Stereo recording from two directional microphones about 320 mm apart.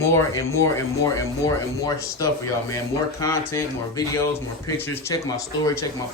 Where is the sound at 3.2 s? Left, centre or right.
Centre.